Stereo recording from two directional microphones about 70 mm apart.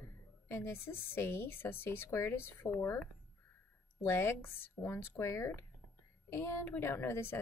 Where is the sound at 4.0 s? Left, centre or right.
Left.